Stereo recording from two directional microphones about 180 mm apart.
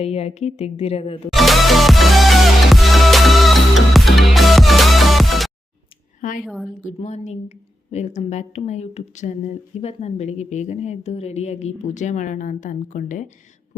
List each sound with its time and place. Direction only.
0.0 s a woman's voice: 35° left (ahead or behind)
1.3 s music: centre (ahead or behind)
6.4 s a woman's voice: centre (ahead or behind)
6.8 s a woman's voice: 40° left (ahead or behind)